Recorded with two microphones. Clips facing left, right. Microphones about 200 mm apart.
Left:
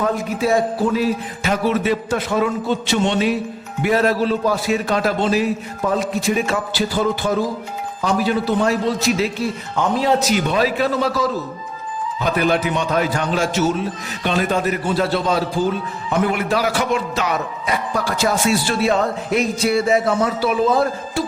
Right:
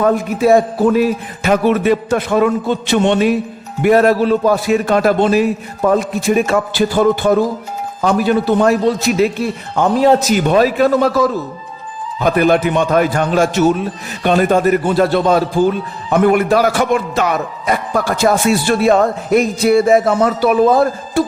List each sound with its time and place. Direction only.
0.0 s a man's voice: 55° right (ahead or behind)